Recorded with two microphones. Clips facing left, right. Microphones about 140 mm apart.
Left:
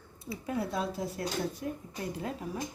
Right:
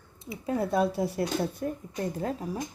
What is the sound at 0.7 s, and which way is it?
Speech, 60° right (ahead or behind).